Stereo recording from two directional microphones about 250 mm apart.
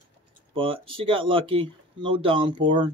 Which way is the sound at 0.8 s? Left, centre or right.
Right.